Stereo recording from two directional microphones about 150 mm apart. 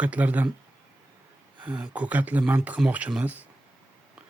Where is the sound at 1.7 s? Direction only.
10° right (ahead or behind).